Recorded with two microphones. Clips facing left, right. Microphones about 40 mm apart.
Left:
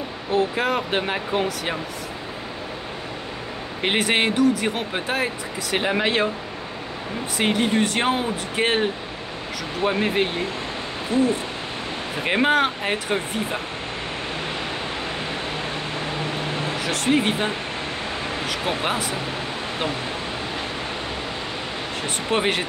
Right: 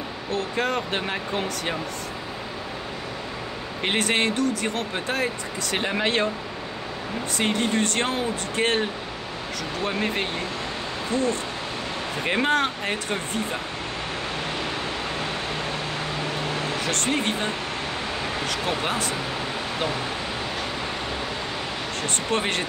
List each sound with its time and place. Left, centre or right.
0.3 s speech: centre
3.8 s speech: centre
7.3 s speech: centre
9.8 s speech: centre
16.8 s speech: centre
18.5 s speech: centre
22.0 s speech: centre